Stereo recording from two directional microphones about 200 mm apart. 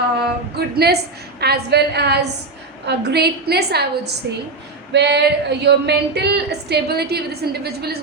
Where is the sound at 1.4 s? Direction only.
55° right (ahead or behind).